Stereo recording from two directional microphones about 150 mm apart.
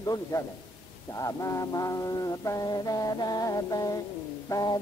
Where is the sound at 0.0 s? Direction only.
25° left (ahead or behind).